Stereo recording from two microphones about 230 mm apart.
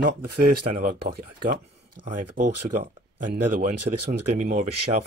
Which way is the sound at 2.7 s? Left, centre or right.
Right.